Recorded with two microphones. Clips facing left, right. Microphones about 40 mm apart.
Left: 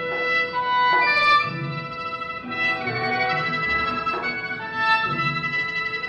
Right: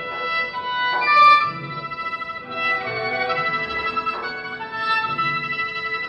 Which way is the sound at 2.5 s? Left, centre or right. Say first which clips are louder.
Right 1 dB; centre.